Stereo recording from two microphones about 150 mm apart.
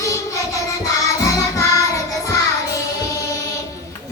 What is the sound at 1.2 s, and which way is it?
Music, 25° left (ahead or behind).